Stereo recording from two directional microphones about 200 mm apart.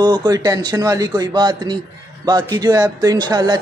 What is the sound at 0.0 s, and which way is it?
Speech, 20° right (ahead or behind).